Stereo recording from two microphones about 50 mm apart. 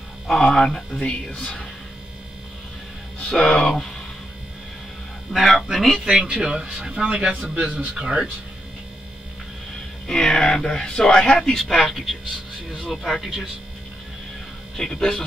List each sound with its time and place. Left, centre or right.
0.3 s speech: centre
3.3 s speech: centre
5.3 s speech: centre
6.0 s a man's voice: centre
10.0 s speech: centre
14.8 s speech: centre